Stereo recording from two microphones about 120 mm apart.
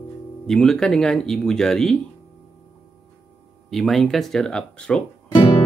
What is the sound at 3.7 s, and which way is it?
Speech, centre (ahead or behind).